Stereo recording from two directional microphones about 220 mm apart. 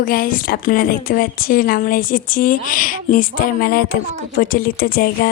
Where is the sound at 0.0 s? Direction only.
40° left (ahead or behind).